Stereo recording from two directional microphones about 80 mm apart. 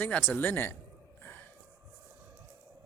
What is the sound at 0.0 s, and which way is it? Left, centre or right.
Speech, left.